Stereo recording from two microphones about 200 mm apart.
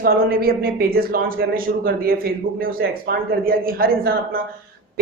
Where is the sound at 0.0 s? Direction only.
50° right (ahead or behind).